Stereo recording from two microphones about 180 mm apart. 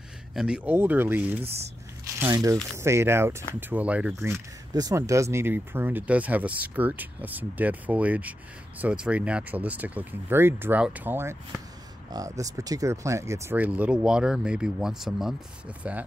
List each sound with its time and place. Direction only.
0.3 s speech: 5° right (ahead or behind)